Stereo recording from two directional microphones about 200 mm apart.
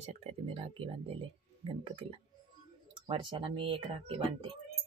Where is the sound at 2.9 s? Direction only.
25° right (ahead or behind).